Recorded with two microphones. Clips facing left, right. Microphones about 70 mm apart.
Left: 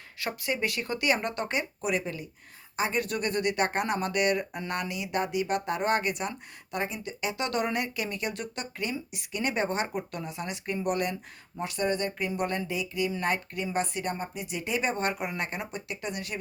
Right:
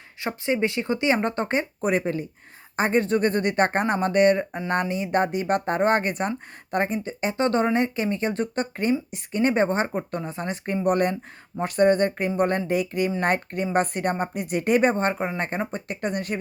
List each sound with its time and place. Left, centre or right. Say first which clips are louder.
0.2 s speech: right 6 dB; right